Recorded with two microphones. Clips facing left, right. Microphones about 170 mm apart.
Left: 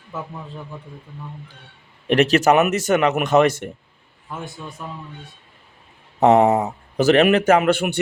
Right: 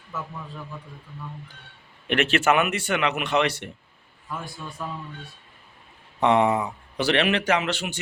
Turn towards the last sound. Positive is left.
turn(degrees=55)  # may be behind; listen again after turning